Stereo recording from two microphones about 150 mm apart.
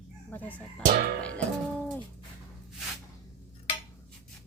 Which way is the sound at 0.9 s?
70° right (ahead or behind).